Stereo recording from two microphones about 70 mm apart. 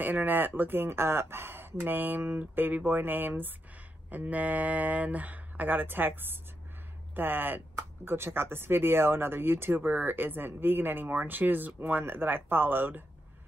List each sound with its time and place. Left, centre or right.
0.0 s speech: right